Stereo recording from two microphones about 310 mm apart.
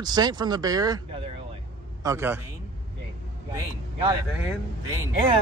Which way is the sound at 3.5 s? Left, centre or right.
Centre.